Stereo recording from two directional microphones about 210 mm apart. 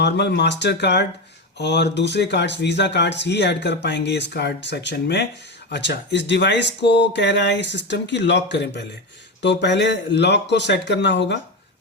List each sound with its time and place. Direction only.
0.0 s speech: 55° left (ahead or behind)